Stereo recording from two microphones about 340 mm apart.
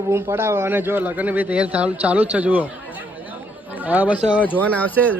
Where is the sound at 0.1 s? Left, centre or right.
Centre.